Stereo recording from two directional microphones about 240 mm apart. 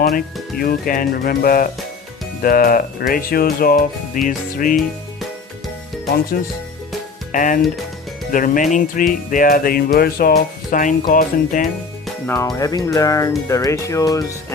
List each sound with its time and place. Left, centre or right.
0.6 s speech: left
4.8 s music: centre
7.3 s speech: left
12.0 s speech: centre